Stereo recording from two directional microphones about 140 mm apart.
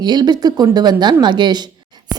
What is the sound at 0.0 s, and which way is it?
A woman's voice, 30° right (ahead or behind).